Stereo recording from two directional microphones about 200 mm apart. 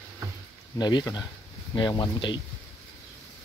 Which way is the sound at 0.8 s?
20° left (ahead or behind).